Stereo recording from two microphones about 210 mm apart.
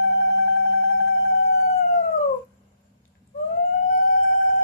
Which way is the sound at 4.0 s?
45° left (ahead or behind).